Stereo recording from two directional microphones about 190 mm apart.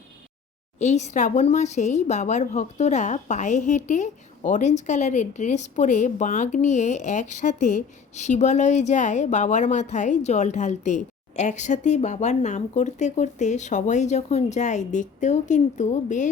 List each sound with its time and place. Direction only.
0.8 s speech: 35° left (ahead or behind)